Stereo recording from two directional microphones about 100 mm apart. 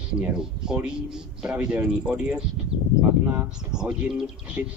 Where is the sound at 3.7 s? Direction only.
10° right (ahead or behind).